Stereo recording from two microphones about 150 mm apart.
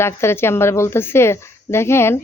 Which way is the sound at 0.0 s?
15° left (ahead or behind).